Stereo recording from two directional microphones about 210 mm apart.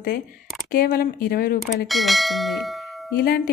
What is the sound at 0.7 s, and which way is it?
Speech, 45° left (ahead or behind).